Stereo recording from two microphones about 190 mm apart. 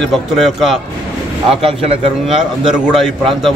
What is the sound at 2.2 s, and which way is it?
A man's voice, 5° right (ahead or behind).